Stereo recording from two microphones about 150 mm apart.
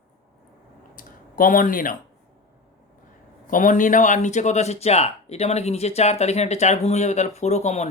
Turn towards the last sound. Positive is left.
turn(degrees=50)  # may be behind; listen again after turning